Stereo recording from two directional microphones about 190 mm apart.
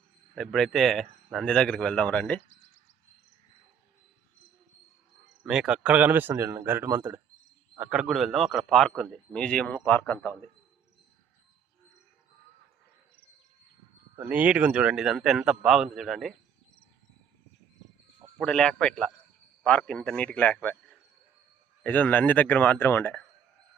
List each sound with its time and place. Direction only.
0.3 s speech: centre (ahead or behind)
2.5 s a sound: 35° left (ahead or behind)
5.2 s speech: 5° right (ahead or behind)
14.2 s speech: 10° right (ahead or behind)
18.3 s speech: 5° left (ahead or behind)
21.8 s speech: 10° left (ahead or behind)